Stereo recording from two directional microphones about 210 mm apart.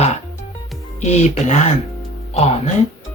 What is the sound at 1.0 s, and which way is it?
Speech, 35° left (ahead or behind).